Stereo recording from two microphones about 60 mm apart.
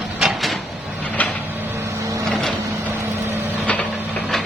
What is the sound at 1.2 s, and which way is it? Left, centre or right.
Vehicle, left.